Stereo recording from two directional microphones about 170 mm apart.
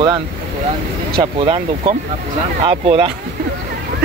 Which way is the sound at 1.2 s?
30° right (ahead or behind).